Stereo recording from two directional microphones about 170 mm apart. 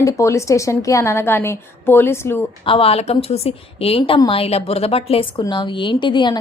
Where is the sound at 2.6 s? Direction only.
35° left (ahead or behind).